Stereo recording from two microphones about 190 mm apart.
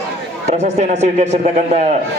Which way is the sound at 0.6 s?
35° right (ahead or behind).